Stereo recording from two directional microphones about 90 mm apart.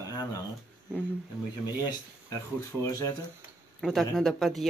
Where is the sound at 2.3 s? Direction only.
30° left (ahead or behind).